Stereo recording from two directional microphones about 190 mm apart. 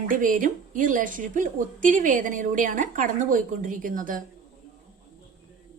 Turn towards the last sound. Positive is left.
turn(degrees=-45)  # may be behind; listen again after turning